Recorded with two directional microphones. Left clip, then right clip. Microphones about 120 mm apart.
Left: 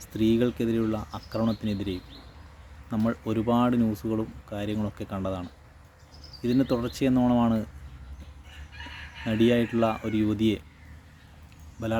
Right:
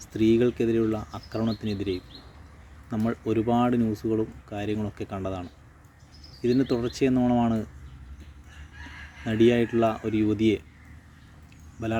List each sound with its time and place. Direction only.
0.0 s speech: 15° left (ahead or behind)
9.2 s speech: 15° left (ahead or behind)